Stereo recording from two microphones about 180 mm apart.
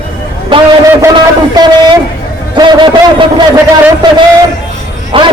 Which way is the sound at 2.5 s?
25° right (ahead or behind).